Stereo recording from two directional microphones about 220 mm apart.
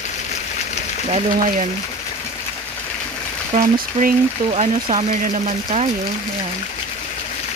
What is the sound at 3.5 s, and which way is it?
Speech, 35° right (ahead or behind).